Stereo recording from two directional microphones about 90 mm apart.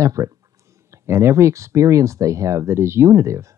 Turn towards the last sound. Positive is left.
turn(degrees=-30)  # may be behind; listen again after turning